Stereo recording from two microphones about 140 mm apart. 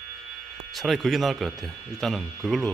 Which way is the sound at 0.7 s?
Centre (ahead or behind).